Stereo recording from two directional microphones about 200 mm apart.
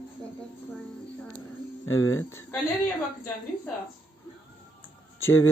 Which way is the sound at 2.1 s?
10° left (ahead or behind).